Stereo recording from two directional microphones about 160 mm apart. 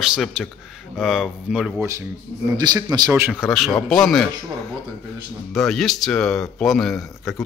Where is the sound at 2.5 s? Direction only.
25° right (ahead or behind).